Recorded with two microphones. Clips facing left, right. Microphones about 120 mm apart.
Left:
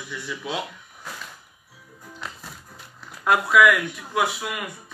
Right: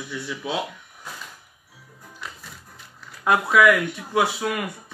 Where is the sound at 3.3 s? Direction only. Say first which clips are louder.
Even; 20° right (ahead or behind).